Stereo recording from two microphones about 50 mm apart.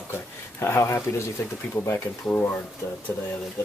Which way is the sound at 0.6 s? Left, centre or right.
Left.